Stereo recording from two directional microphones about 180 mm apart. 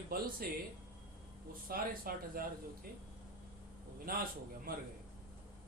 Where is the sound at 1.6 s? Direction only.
55° right (ahead or behind).